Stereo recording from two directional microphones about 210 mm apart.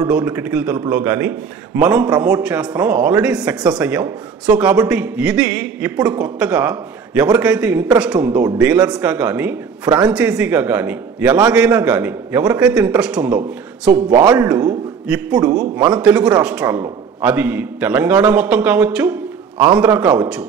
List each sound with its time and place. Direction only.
0.1 s a man's voice: 10° right (ahead or behind)
14.1 s speech: 20° right (ahead or behind)
15.0 s a man's voice: 5° right (ahead or behind)